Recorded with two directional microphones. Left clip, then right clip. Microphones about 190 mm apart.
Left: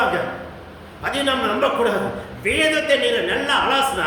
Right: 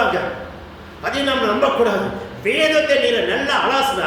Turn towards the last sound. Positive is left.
turn(degrees=20)  # may be behind; listen again after turning